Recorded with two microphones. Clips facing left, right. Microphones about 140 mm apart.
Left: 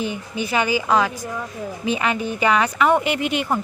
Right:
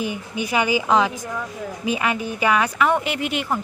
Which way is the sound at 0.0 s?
10° right (ahead or behind).